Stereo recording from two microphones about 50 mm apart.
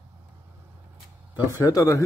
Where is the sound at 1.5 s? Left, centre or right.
Left.